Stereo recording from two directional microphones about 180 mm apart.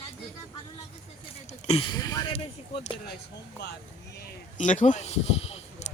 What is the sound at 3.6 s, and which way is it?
Speech, 70° left (ahead or behind).